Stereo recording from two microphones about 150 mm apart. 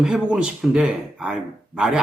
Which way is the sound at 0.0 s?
5° right (ahead or behind).